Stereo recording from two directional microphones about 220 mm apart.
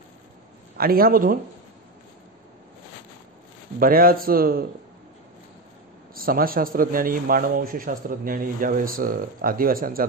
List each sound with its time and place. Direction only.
0.7 s a man's voice: 40° right (ahead or behind)
3.8 s a man's voice: 40° right (ahead or behind)
6.1 s a man's voice: 40° right (ahead or behind)